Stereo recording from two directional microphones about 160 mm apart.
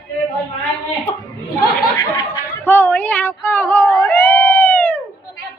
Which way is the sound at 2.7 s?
15° left (ahead or behind).